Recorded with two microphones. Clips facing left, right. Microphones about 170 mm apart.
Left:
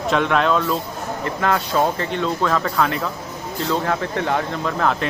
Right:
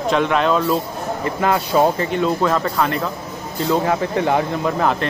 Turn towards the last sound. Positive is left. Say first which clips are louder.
# right 2 dB
turn(degrees=-10)  # may be behind; listen again after turning